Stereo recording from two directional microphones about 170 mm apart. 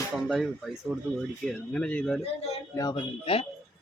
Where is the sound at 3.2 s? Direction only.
35° left (ahead or behind).